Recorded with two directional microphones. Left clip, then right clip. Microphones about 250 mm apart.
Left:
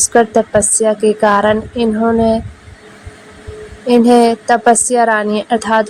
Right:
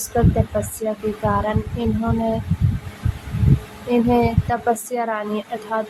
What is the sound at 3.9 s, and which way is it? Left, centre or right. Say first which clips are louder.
A woman's voice: left 9 dB; left.